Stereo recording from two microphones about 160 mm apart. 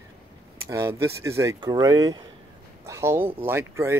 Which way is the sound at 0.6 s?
20° right (ahead or behind).